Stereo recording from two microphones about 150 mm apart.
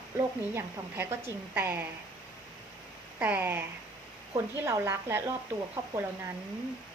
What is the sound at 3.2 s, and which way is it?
A woman's voice, 10° right (ahead or behind).